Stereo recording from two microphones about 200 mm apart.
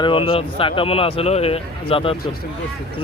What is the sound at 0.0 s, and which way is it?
A man's voice, 25° left (ahead or behind).